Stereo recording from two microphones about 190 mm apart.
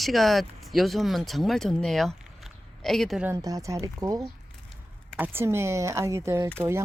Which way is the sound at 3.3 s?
20° right (ahead or behind).